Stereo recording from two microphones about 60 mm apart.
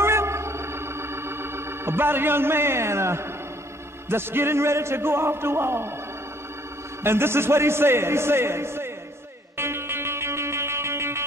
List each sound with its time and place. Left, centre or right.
0.0 s organ: right
4.1 s a man's voice: right
7.0 s a man's voice: right
9.6 s music: right